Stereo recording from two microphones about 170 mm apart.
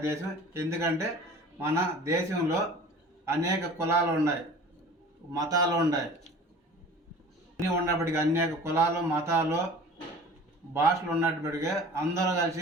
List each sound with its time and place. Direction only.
0.0 s a man's voice: 15° right (ahead or behind)
7.6 s a man's voice: 15° right (ahead or behind)
10.8 s a man's voice: 15° right (ahead or behind)